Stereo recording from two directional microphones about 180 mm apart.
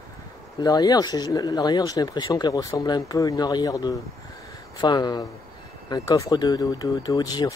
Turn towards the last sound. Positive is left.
turn(degrees=20)  # may be behind; listen again after turning